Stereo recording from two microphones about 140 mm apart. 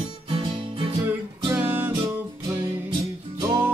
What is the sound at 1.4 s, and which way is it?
Music, 15° right (ahead or behind).